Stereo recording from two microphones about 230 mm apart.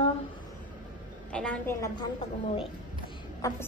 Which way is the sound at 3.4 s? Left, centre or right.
Centre.